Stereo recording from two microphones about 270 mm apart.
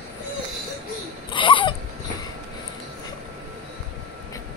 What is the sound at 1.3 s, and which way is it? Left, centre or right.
Laughter, centre.